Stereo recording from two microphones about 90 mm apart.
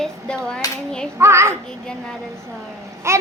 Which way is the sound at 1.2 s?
30° right (ahead or behind).